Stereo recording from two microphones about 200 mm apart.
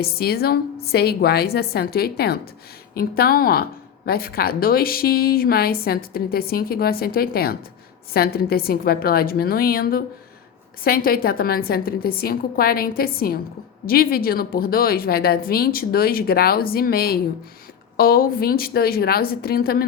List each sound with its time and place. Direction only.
0.0 s a woman's voice: 50° left (ahead or behind)